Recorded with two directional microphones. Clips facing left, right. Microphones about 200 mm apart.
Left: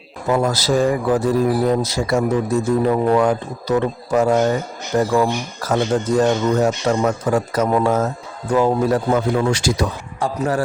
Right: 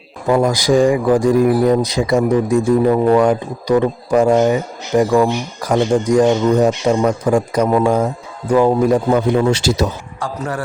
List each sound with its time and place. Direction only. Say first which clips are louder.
0.3 s speech: right 4 dB; 15° right (ahead or behind)
9.5 s speech: right 3 dB; 25° right (ahead or behind)
10.2 s a man's voice: left 4 dB; 25° left (ahead or behind)